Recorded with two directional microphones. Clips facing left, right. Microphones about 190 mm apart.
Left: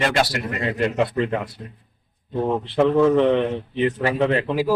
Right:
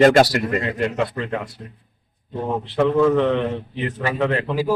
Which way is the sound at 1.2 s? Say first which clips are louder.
Left 5 dB; 20° left (ahead or behind).